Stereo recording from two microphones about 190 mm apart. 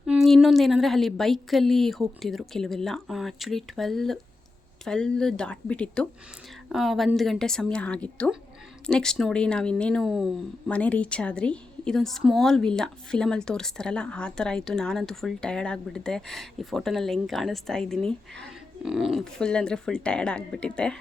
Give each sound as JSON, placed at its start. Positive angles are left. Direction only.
{"t": 0.0, "sound": "a woman's voice", "side_deg": 0}